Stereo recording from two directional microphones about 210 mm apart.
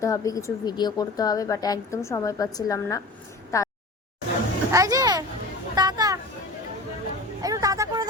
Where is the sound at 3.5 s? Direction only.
15° left (ahead or behind).